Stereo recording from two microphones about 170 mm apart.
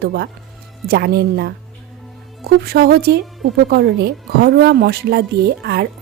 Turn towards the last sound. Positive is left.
turn(degrees=-70)  # may be behind; listen again after turning